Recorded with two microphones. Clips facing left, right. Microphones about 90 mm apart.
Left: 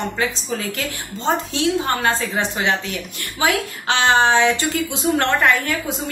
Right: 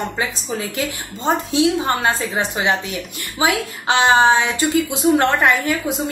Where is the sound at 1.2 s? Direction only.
15° right (ahead or behind).